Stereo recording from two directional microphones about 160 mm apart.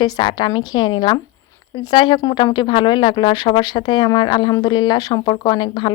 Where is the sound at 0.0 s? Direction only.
30° left (ahead or behind).